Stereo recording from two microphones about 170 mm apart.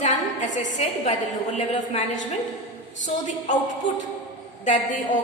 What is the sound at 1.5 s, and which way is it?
Speech, 45° left (ahead or behind).